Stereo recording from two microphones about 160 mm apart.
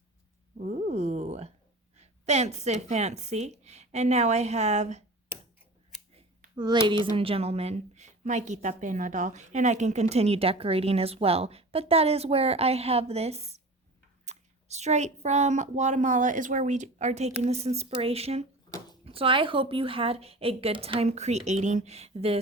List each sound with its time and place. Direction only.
0.6 s a sound: 45° right (ahead or behind)
2.0 s speech: 45° right (ahead or behind)
5.3 s tick-tock: 10° right (ahead or behind)
6.6 s speech: 30° right (ahead or behind)